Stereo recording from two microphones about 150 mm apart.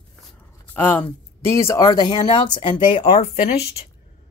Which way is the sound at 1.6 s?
20° left (ahead or behind).